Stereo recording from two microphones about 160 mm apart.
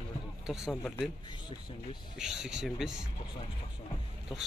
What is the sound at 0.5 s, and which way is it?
Speech, 5° right (ahead or behind).